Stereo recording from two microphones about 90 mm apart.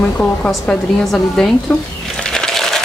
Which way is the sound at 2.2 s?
5° left (ahead or behind).